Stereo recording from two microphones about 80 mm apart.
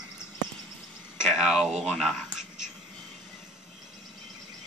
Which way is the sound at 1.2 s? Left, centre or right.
Centre.